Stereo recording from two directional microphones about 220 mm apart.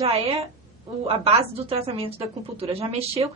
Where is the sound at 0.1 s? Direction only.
25° right (ahead or behind).